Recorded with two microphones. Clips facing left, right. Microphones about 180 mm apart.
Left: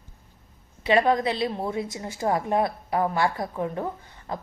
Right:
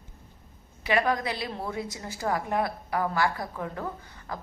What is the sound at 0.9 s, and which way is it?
A woman's voice, 25° left (ahead or behind).